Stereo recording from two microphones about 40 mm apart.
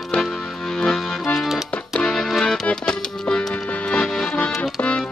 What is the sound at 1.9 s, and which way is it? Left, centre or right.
Music, centre.